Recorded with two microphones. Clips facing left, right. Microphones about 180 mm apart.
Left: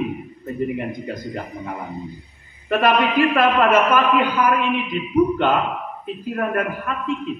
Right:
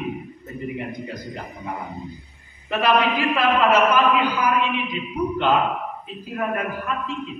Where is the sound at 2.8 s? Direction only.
50° left (ahead or behind).